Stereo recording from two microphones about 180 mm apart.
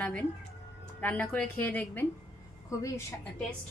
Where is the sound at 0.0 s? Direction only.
10° left (ahead or behind).